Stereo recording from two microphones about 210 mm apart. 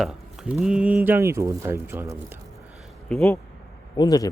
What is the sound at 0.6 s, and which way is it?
Speech, 5° right (ahead or behind).